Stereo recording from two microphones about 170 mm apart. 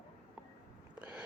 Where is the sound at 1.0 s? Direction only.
5° right (ahead or behind).